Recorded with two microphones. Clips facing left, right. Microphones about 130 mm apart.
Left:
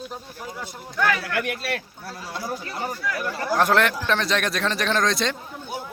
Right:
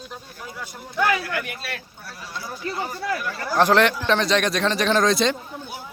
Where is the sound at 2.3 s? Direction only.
45° left (ahead or behind).